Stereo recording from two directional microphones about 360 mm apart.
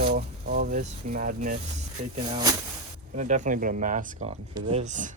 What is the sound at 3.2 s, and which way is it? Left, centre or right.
Speech, centre.